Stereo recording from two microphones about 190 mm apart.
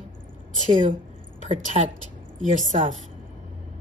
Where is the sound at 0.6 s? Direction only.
40° right (ahead or behind).